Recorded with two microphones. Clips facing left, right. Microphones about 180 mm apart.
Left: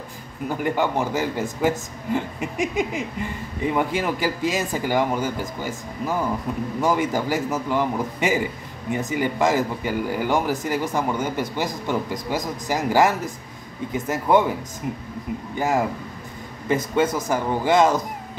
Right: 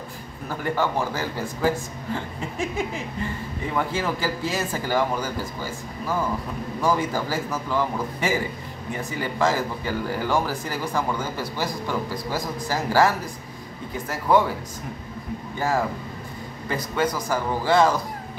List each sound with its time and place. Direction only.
0.5 s speech: 15° left (ahead or behind)
15.5 s speech: 20° left (ahead or behind)